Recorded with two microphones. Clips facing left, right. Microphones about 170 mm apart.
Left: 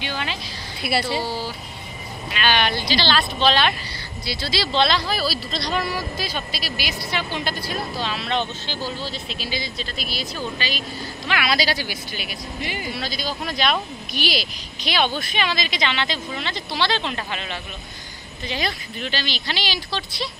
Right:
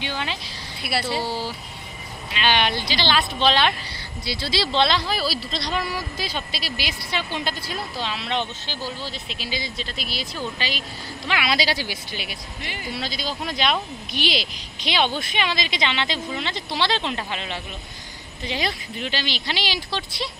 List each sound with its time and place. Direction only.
0.0 s a sound: 20° right (ahead or behind)
0.8 s speech: centre (ahead or behind)
2.4 s speech: 20° right (ahead or behind)
12.6 s speech: 5° left (ahead or behind)
12.9 s speech: 20° right (ahead or behind)